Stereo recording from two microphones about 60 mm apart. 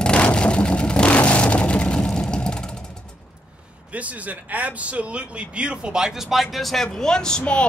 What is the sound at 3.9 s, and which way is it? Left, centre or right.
A child's voice, right.